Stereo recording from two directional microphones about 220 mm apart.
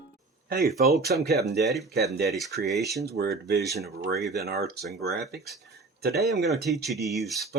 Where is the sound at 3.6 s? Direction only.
Centre (ahead or behind).